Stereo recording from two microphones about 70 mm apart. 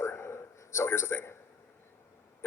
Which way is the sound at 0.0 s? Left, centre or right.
Left.